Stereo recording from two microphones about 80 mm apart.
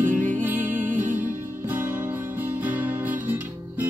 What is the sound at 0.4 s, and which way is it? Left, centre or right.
Music, right.